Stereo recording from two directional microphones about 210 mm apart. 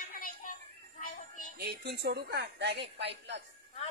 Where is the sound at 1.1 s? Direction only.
40° left (ahead or behind).